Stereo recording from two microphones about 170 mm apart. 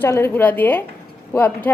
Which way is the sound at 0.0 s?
15° left (ahead or behind).